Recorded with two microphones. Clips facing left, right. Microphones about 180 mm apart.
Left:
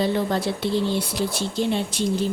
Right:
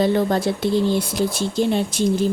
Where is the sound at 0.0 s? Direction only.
45° right (ahead or behind).